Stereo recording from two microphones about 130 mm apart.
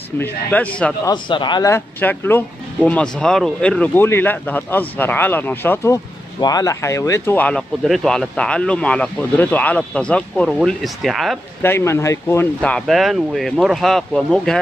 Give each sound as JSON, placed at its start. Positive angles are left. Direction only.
{"t": 0.2, "sound": "speech", "side_deg": 10}
{"t": 1.0, "sound": "speech", "side_deg": 35}
{"t": 1.7, "sound": "speech", "side_deg": 15}
{"t": 6.4, "sound": "speech", "side_deg": 25}
{"t": 7.8, "sound": "speech", "side_deg": 0}
{"t": 11.6, "sound": "speech", "side_deg": 20}
{"t": 12.6, "sound": "speech", "side_deg": 5}